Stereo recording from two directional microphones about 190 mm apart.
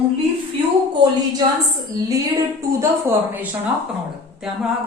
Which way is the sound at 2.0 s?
20° right (ahead or behind).